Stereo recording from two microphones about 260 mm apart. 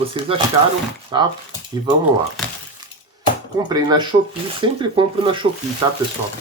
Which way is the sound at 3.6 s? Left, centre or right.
Centre.